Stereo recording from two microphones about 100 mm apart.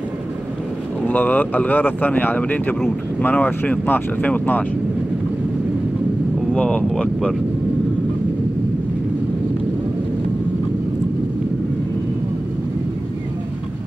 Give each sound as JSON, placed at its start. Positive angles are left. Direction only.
{"t": 1.0, "sound": "speech", "side_deg": 15}
{"t": 6.5, "sound": "speech", "side_deg": 10}